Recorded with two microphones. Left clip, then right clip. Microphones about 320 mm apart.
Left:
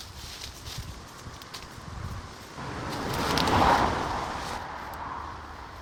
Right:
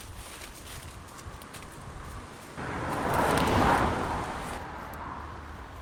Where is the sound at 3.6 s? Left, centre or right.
Left.